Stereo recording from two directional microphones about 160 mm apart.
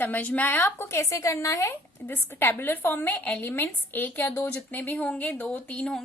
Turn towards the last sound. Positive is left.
turn(degrees=5)  # may be behind; listen again after turning